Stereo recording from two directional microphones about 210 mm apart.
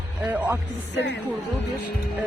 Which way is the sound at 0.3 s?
10° right (ahead or behind).